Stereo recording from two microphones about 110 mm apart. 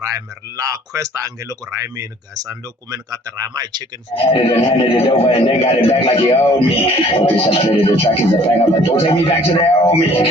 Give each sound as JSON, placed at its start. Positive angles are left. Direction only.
{"t": 0.0, "sound": "speech", "side_deg": -30}
{"t": 4.1, "sound": "speech", "side_deg": 60}